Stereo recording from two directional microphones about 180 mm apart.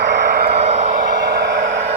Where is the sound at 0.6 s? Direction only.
35° right (ahead or behind).